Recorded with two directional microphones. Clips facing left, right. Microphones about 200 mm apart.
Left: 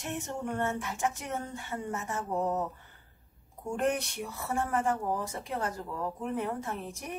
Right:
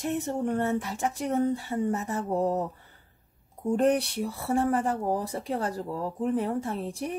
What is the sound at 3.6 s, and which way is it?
A woman's voice, 35° right (ahead or behind).